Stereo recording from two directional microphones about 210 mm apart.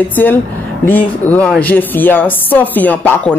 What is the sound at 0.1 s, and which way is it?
Speech, 10° left (ahead or behind).